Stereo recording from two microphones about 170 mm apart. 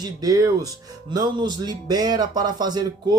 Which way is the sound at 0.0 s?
20° right (ahead or behind).